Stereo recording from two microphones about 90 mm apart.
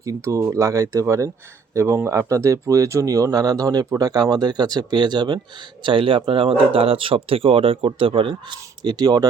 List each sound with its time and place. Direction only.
0.0 s speech: 35° right (ahead or behind); by 5.4 s 55° right (ahead or behind)
5.8 s speech: 75° right (ahead or behind); by 9.2 s 50° right (ahead or behind)